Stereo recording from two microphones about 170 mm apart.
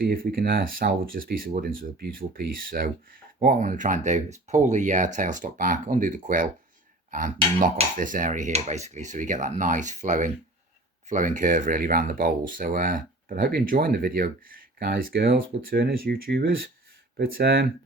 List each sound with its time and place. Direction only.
0.0 s speech: 60° right (ahead or behind)